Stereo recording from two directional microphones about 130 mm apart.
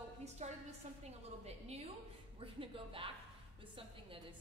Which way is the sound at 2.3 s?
45° right (ahead or behind).